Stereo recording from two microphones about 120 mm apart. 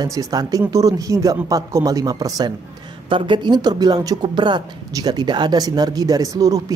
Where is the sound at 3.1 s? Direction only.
45° right (ahead or behind).